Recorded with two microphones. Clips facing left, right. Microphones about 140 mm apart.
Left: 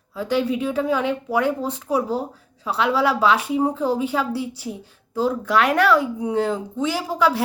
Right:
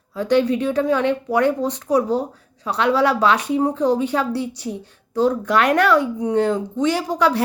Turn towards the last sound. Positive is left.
turn(degrees=5)  # may be behind; listen again after turning